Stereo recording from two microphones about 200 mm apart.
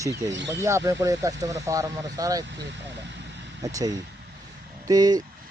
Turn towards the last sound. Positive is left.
turn(degrees=-20)  # may be behind; listen again after turning